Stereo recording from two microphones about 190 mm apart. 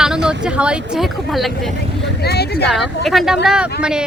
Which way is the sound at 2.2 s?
60° left (ahead or behind).